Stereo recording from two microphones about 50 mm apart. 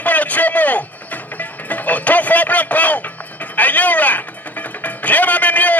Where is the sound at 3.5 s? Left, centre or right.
Left.